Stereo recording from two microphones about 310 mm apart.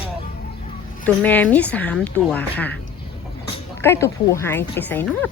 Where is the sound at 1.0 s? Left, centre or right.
Centre.